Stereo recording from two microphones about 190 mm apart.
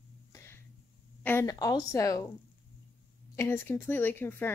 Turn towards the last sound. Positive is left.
turn(degrees=10)  # may be behind; listen again after turning